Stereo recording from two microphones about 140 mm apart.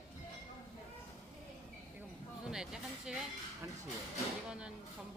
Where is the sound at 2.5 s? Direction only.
5° right (ahead or behind).